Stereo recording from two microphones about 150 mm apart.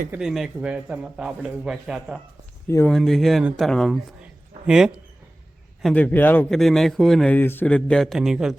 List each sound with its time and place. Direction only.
0.2 s a man's voice: centre (ahead or behind)
2.6 s speech: 15° left (ahead or behind)
2.9 s a man's voice: centre (ahead or behind)
4.2 s a sound: 5° right (ahead or behind)
5.8 s a man's voice: 10° left (ahead or behind)
6.6 s a man's voice: centre (ahead or behind)